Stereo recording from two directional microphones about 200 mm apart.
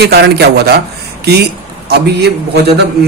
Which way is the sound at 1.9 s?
55° right (ahead or behind).